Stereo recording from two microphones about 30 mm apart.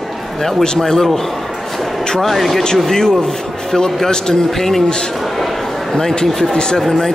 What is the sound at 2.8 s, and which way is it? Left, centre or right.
Speech, left.